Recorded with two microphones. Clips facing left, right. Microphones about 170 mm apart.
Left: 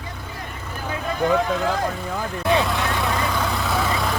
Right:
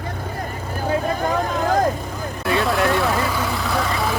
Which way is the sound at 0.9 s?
45° right (ahead or behind).